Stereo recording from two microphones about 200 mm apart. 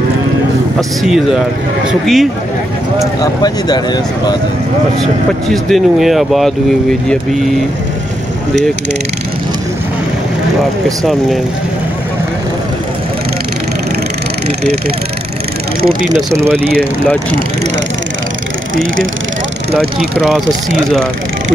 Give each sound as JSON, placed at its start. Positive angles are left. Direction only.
{"t": 0.7, "sound": "speech", "side_deg": 0}
{"t": 3.2, "sound": "speech", "side_deg": 20}
{"t": 5.5, "sound": "speech", "side_deg": 0}
{"t": 15.8, "sound": "speech", "side_deg": -45}
{"t": 16.3, "sound": "speech", "side_deg": -15}
{"t": 20.0, "sound": "speech", "side_deg": 0}